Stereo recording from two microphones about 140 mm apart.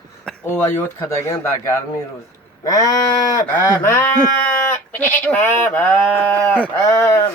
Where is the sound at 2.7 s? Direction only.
20° left (ahead or behind).